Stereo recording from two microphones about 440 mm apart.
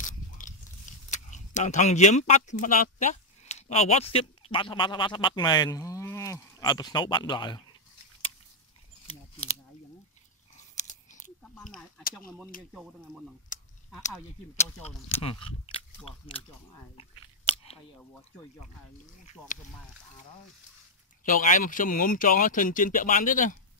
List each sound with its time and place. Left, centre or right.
0.2 s biting: centre
1.1 s speech: centre
9.4 s speech: centre
10.8 s a sound: centre
14.9 s speech: centre
15.5 s speech: centre
19.4 s speech: centre
21.2 s speech: centre